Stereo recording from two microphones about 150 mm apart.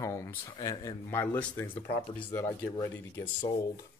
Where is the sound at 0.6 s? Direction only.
25° left (ahead or behind).